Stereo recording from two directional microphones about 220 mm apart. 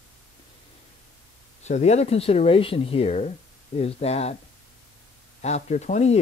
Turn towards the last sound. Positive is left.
turn(degrees=30)  # may be behind; listen again after turning